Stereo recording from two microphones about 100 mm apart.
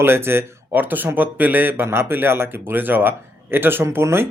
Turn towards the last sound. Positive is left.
turn(degrees=-25)  # may be behind; listen again after turning